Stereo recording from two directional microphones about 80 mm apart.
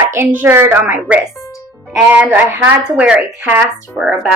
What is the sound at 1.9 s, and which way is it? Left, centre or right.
Speech, centre.